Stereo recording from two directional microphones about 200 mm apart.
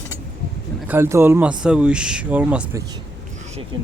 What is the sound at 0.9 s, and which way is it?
Speech, 10° right (ahead or behind).